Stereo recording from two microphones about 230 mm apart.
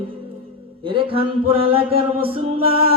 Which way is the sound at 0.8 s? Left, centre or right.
Right.